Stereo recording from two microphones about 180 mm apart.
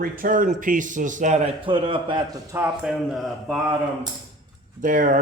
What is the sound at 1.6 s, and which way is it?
A man's voice, 30° right (ahead or behind).